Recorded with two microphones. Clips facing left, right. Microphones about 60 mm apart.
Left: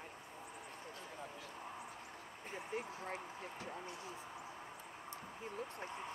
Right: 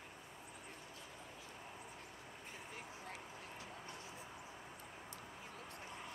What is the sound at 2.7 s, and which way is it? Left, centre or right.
Speech, left.